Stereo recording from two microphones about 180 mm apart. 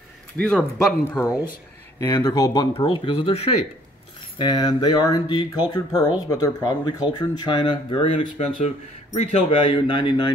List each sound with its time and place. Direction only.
0.4 s speech: 5° left (ahead or behind)
2.0 s speech: 20° left (ahead or behind)